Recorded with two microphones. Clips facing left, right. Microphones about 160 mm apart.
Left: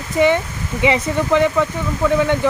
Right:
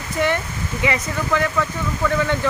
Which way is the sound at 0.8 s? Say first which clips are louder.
Left 6 dB; 20° left (ahead or behind).